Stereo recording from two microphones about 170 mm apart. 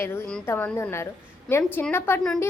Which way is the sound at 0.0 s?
10° left (ahead or behind).